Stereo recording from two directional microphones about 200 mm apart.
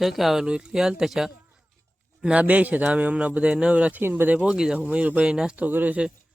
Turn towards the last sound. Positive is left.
turn(degrees=-5)  # may be behind; listen again after turning